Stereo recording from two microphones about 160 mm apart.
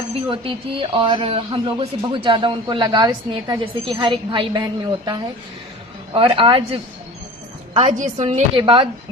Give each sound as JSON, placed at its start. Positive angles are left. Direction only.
{"t": 0.3, "sound": "speech", "side_deg": -35}
{"t": 6.1, "sound": "speech", "side_deg": -35}
{"t": 7.8, "sound": "a woman's voice", "side_deg": -50}